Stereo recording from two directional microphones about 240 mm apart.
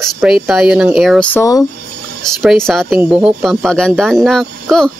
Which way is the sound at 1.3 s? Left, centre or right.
Centre.